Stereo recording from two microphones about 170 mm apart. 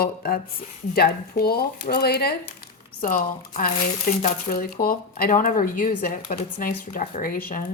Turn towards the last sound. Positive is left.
turn(degrees=55)  # may be behind; listen again after turning